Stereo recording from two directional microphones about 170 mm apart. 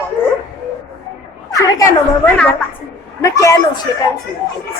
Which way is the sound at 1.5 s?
20° left (ahead or behind).